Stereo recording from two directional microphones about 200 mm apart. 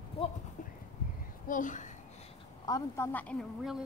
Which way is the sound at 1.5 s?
40° left (ahead or behind).